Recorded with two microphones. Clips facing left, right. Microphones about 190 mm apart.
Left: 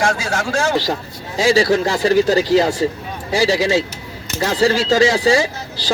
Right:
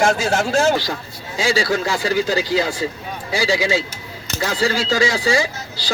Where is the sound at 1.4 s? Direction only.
35° left (ahead or behind).